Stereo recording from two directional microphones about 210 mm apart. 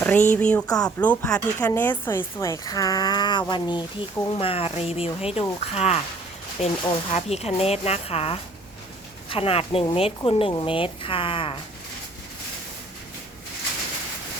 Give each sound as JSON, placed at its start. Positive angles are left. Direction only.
{"t": 0.0, "sound": "speech", "side_deg": 10}